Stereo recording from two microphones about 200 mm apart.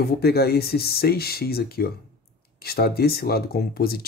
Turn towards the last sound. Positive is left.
turn(degrees=50)  # may be behind; listen again after turning